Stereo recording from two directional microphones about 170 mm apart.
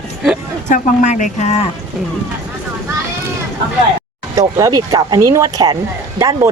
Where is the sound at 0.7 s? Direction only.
45° left (ahead or behind).